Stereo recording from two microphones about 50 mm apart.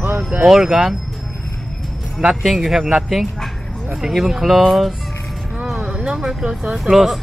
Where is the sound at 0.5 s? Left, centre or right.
Centre.